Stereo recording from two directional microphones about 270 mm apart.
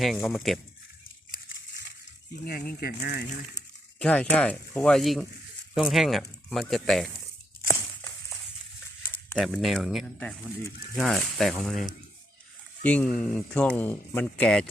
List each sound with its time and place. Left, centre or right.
0.0 s speech: centre
2.3 s speech: left
4.0 s speech: centre
9.3 s speech: centre